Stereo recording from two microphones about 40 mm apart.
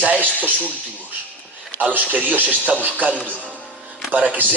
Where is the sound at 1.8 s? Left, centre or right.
Right.